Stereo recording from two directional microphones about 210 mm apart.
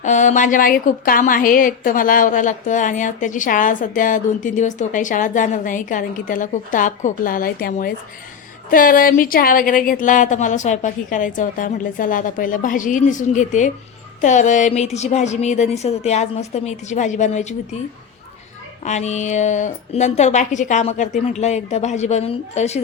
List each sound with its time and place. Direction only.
0.0 s a woman's voice: 35° left (ahead or behind)
18.9 s a woman's voice: 35° left (ahead or behind)